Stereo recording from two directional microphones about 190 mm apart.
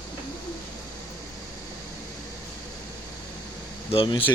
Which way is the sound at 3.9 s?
30° left (ahead or behind).